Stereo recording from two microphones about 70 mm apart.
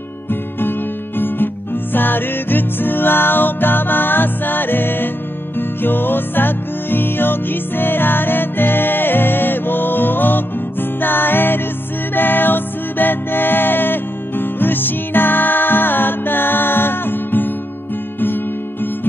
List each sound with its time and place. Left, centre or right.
0.3 s music: left